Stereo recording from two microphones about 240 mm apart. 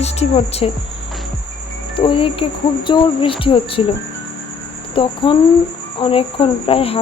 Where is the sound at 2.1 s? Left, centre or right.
Left.